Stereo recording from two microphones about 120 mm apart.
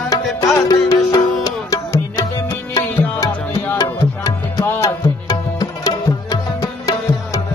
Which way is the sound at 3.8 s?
30° left (ahead or behind).